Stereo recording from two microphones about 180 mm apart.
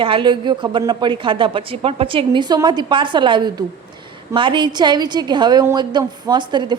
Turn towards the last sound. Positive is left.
turn(degrees=-25)  # may be behind; listen again after turning